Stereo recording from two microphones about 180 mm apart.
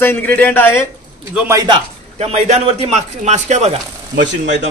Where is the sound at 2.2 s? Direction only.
35° right (ahead or behind).